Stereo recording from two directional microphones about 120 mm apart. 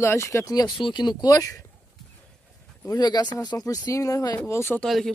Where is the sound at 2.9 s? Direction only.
35° left (ahead or behind).